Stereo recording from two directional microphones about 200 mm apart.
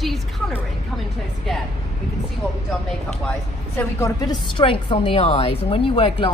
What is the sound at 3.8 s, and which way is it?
A woman's voice, 15° left (ahead or behind).